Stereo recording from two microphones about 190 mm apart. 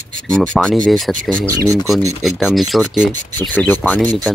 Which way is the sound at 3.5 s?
10° left (ahead or behind).